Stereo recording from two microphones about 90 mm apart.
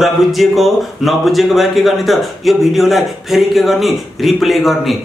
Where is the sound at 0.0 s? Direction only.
Centre (ahead or behind).